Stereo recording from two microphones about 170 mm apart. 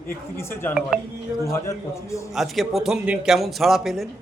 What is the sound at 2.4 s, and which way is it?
A man's voice, centre (ahead or behind).